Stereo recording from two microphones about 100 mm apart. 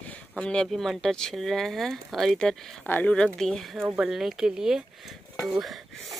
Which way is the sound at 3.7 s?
15° right (ahead or behind).